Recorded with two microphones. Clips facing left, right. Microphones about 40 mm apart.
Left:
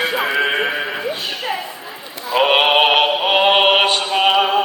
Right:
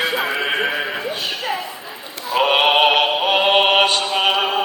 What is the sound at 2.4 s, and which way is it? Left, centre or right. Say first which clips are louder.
Synthetic singing: left 1 dB; centre.